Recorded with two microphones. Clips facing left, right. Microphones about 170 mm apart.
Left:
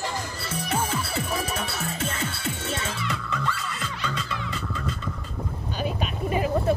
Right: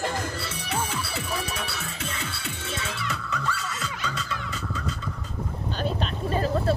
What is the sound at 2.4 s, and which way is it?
Music, 45° left (ahead or behind).